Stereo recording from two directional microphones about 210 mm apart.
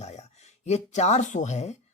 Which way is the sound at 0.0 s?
30° left (ahead or behind).